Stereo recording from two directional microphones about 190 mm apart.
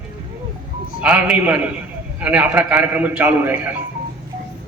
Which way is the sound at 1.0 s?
10° right (ahead or behind).